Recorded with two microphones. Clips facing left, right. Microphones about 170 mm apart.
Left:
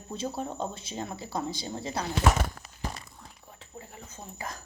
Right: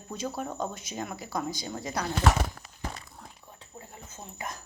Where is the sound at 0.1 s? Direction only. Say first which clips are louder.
Even; 30° left (ahead or behind).